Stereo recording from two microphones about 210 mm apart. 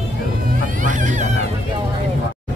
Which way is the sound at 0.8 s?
35° right (ahead or behind).